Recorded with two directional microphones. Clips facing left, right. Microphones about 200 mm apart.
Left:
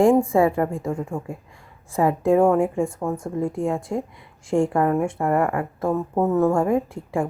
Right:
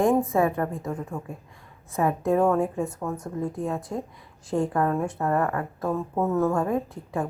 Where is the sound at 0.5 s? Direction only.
25° left (ahead or behind).